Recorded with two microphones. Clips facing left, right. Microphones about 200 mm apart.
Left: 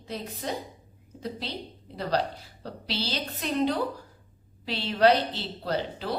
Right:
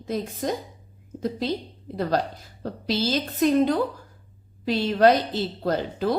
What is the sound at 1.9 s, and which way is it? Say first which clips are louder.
A woman's voice: right 3 dB; 45° right (ahead or behind).